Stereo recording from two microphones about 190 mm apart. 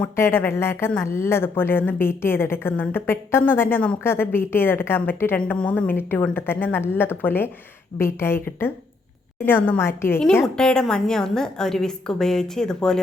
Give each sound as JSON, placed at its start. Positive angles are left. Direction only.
{"t": 0.0, "sound": "a woman's voice", "side_deg": 10}